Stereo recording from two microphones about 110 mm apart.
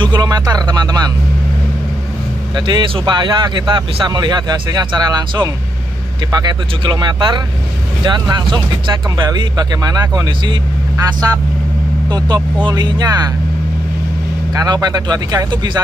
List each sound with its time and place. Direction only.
0.0 s a sound: 40° right (ahead or behind)
2.5 s speech: 45° right (ahead or behind)
14.5 s speech: 35° right (ahead or behind)